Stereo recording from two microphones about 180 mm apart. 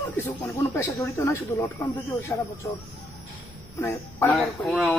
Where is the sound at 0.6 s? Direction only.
15° left (ahead or behind).